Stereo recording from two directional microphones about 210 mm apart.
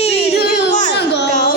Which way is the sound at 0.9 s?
55° left (ahead or behind).